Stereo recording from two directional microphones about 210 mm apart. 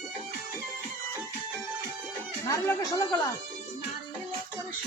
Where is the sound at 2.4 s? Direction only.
15° left (ahead or behind).